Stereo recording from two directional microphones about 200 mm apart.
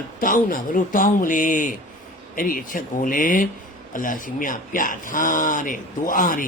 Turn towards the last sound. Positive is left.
turn(degrees=45)  # may be behind; listen again after turning